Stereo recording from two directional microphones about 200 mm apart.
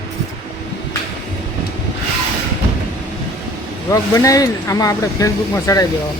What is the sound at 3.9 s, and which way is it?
Speech, 15° left (ahead or behind).